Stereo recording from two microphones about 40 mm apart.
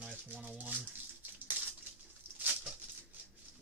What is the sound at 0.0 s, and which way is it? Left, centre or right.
Rattle, right.